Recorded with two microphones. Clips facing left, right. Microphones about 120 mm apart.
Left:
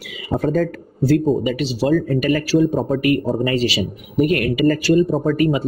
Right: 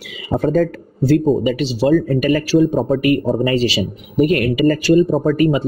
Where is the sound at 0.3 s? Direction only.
30° right (ahead or behind).